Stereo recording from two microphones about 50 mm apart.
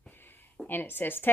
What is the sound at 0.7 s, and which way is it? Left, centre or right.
Speech, left.